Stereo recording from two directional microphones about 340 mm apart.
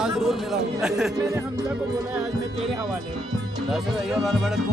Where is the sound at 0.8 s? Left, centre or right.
Centre.